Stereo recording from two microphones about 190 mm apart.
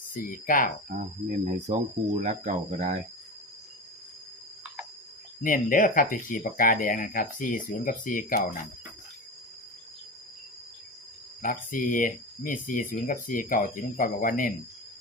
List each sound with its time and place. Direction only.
0.1 s speech: 45° left (ahead or behind)
0.9 s speech: 40° right (ahead or behind)
5.4 s speech: 45° left (ahead or behind)
11.4 s speech: 45° left (ahead or behind)